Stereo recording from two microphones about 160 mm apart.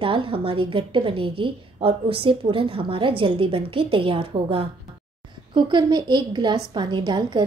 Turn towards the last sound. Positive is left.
turn(degrees=-30)  # may be behind; listen again after turning